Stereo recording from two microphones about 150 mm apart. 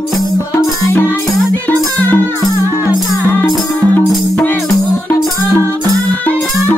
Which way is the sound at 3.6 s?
10° left (ahead or behind).